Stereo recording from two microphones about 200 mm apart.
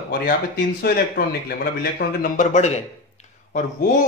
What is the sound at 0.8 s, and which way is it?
Speech, 50° left (ahead or behind).